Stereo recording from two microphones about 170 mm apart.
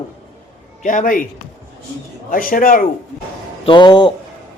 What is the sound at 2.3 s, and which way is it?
Speech, 55° left (ahead or behind).